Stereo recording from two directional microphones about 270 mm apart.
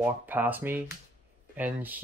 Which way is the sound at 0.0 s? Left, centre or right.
Centre.